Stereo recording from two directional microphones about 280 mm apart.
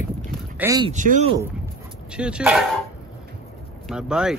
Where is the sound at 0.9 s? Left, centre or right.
Right.